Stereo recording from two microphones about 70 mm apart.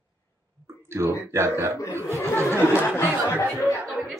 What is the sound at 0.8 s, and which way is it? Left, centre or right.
Speech, right.